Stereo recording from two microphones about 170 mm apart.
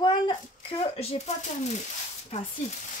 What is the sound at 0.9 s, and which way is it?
Speech, 40° left (ahead or behind).